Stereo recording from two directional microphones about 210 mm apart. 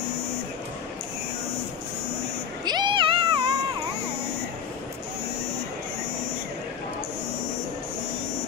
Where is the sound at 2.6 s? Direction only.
20° right (ahead or behind).